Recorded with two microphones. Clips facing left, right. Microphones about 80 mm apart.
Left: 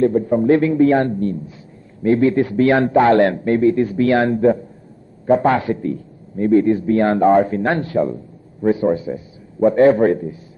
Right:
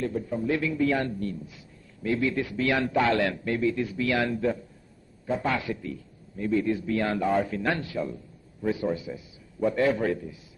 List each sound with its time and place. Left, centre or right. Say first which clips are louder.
0.0 s a man's voice: left 13 dB; left